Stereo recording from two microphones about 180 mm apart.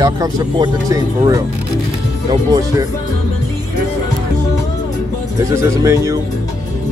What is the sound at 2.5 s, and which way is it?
Speech, 20° right (ahead or behind).